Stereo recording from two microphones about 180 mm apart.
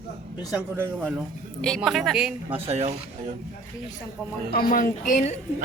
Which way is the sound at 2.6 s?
35° right (ahead or behind).